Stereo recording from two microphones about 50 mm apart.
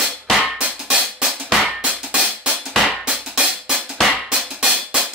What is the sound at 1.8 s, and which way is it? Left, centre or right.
Drum, right.